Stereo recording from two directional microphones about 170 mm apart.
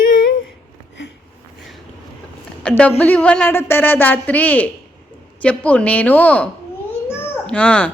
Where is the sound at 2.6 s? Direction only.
10° left (ahead or behind).